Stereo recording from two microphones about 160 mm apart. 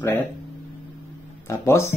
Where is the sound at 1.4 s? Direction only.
15° left (ahead or behind).